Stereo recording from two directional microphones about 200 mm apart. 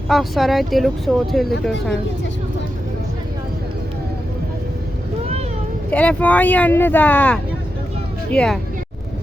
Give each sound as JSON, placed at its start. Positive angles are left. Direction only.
{"t": 0.1, "sound": "speech", "side_deg": 0}
{"t": 5.9, "sound": "speech", "side_deg": 5}